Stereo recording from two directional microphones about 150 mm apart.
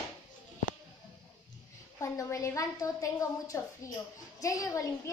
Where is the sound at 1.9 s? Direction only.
20° left (ahead or behind).